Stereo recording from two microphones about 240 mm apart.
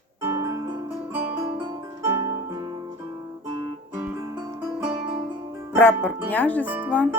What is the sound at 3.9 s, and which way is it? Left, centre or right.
Music, centre.